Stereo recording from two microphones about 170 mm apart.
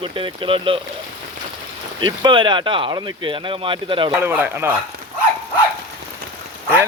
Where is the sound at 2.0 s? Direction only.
30° right (ahead or behind).